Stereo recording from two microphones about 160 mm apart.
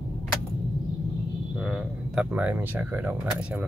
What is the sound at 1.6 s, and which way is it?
Speech, centre (ahead or behind).